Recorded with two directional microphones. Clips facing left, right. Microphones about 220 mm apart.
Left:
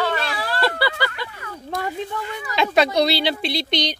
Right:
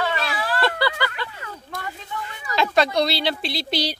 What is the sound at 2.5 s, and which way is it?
Speech, centre (ahead or behind).